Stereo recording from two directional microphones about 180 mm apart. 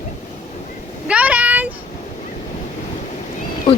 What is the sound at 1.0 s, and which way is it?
Vehicle, 5° right (ahead or behind).